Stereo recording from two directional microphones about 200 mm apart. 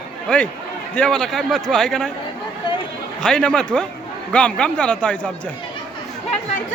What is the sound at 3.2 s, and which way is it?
Speech, 5° left (ahead or behind).